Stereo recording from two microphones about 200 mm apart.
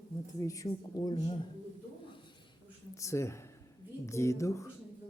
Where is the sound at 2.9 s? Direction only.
15° left (ahead or behind).